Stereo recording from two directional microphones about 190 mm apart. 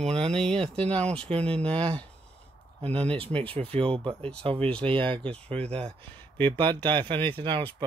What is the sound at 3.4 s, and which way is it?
Speech, 30° right (ahead or behind).